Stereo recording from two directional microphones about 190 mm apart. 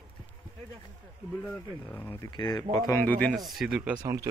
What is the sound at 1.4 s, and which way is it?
Speech, 10° left (ahead or behind).